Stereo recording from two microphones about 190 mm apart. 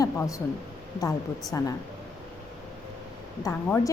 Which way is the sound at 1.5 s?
15° left (ahead or behind).